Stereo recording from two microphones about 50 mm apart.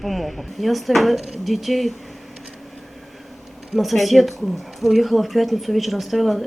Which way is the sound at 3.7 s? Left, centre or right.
Centre.